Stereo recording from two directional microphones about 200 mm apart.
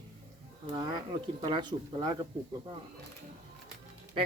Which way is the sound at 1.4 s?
25° right (ahead or behind).